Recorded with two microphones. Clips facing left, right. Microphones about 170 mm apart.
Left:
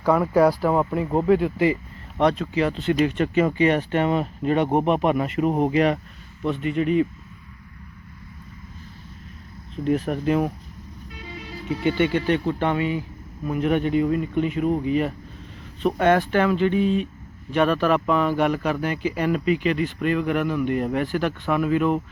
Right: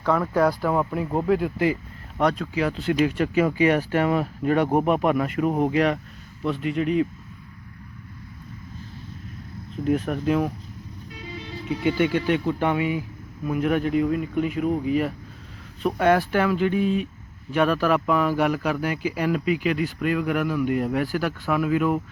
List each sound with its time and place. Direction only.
0.0 s speech: 10° left (ahead or behind); by 4.0 s 5° right (ahead or behind)
4.0 s speech: 20° left (ahead or behind)
5.4 s speech: centre (ahead or behind)
9.7 s speech: 5° right (ahead or behind)
11.8 s speech: 5° right (ahead or behind)